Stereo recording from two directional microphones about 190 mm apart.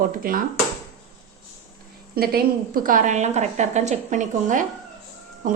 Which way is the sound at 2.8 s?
45° right (ahead or behind).